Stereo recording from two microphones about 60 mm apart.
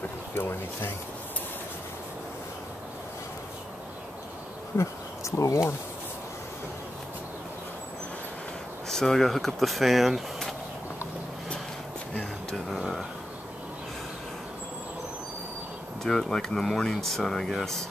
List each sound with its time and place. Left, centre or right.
0.3 s speech: left
4.7 s speech: left
8.8 s speech: centre
12.1 s a sound: centre
12.6 s a sound: centre
16.0 s speech: centre